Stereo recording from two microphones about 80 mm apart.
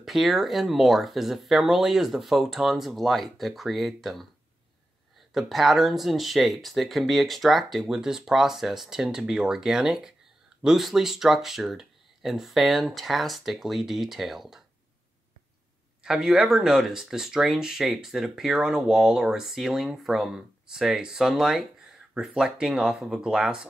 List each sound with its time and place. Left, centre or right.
0.0 s speech: centre
5.3 s speech: centre
16.0 s speech: centre